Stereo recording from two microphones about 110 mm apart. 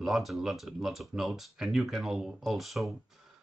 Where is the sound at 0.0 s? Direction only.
Centre (ahead or behind).